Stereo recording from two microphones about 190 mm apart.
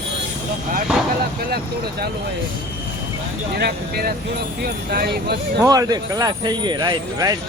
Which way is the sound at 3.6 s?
55° right (ahead or behind).